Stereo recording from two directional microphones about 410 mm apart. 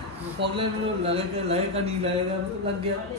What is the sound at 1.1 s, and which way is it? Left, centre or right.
A man's voice, centre.